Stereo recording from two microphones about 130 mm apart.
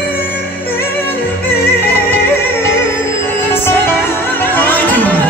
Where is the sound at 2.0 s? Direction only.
20° left (ahead or behind).